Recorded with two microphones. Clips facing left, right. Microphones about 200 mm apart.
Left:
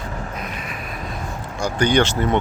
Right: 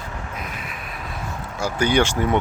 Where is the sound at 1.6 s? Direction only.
5° right (ahead or behind).